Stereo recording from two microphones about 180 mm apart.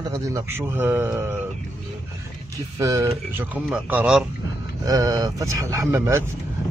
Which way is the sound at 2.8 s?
15° right (ahead or behind).